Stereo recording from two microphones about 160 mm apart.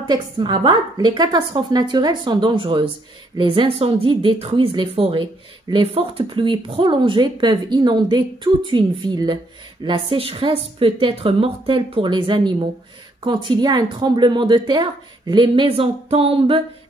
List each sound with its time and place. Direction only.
0.0 s a woman's voice: 30° right (ahead or behind)